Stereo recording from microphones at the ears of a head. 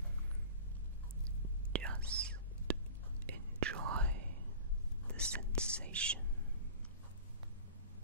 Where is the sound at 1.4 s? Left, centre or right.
Right.